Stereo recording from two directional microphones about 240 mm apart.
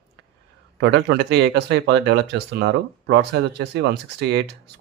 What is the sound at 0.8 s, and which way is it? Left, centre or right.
A man's voice, right.